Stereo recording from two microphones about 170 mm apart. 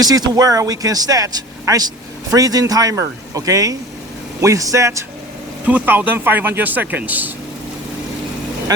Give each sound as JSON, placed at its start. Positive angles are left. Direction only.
{"t": 0.0, "sound": "speech", "side_deg": -20}